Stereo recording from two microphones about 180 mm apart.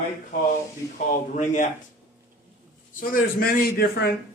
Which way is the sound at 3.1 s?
55° left (ahead or behind).